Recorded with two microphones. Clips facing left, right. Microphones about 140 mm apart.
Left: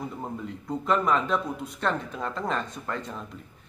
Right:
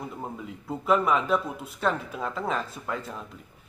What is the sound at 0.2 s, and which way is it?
Speech, 5° right (ahead or behind).